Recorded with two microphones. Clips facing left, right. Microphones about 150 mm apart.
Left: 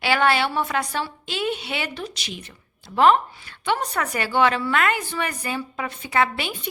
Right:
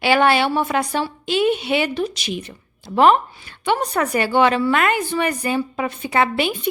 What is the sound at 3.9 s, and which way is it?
A woman's voice, 30° right (ahead or behind).